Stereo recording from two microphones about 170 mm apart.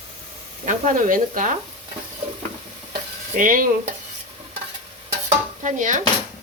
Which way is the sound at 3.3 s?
55° right (ahead or behind).